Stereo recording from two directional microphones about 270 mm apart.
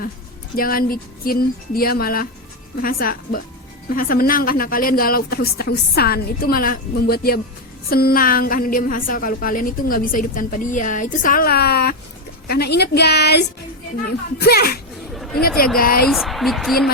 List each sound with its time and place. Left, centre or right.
0.5 s a woman's voice: left
16.0 s a woman's voice: centre